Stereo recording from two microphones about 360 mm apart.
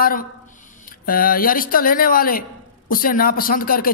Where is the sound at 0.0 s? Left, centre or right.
Left.